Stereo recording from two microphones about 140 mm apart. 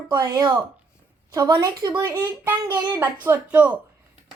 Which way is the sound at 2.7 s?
35° right (ahead or behind).